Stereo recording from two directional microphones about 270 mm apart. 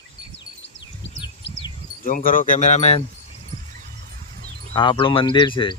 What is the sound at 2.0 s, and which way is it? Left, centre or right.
Speech, left.